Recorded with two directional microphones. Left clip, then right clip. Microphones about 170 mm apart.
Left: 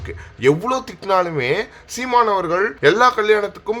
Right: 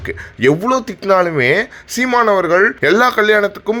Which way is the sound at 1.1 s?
25° right (ahead or behind).